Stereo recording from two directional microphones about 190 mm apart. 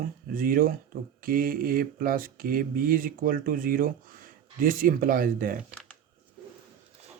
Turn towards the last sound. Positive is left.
turn(degrees=-45)  # may be behind; listen again after turning